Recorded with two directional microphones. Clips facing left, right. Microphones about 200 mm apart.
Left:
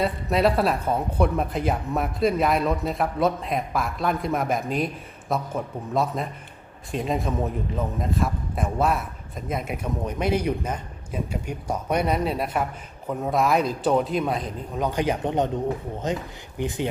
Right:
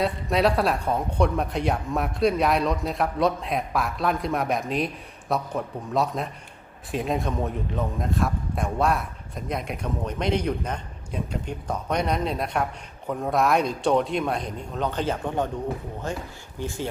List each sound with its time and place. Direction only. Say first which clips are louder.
0.0 s a man's voice: left 1 dB; centre (ahead or behind); by 16.9 s 20° left (ahead or behind)